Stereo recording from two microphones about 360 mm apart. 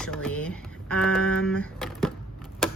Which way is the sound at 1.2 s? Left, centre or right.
Left.